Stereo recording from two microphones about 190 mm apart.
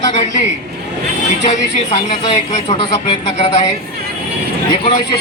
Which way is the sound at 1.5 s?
35° left (ahead or behind).